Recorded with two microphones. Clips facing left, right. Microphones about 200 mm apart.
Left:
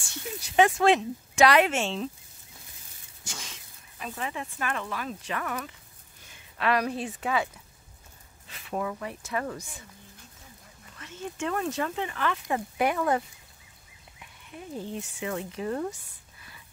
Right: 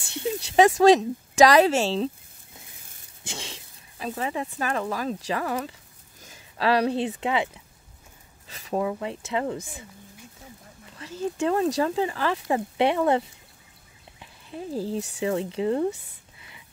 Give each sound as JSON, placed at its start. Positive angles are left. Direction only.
{"t": 0.2, "sound": "speech", "side_deg": -30}
{"t": 3.3, "sound": "speech", "side_deg": -30}
{"t": 8.5, "sound": "a sound", "side_deg": -35}
{"t": 8.8, "sound": "speech", "side_deg": -25}
{"t": 11.0, "sound": "speech", "side_deg": -35}
{"t": 14.2, "sound": "speech", "side_deg": -30}
{"t": 16.3, "sound": "whispering", "side_deg": -20}